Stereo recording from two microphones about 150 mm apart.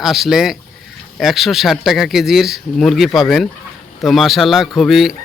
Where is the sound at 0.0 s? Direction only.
Centre (ahead or behind).